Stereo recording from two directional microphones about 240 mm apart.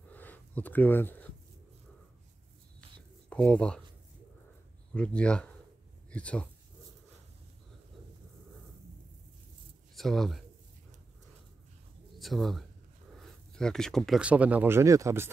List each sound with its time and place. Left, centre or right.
0.1 s a sound: centre
3.3 s speech: centre
4.9 s speech: centre
9.9 s speech: centre
12.2 s speech: centre